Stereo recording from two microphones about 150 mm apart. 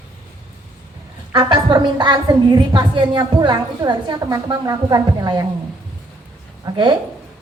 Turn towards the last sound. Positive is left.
turn(degrees=-30)  # may be behind; listen again after turning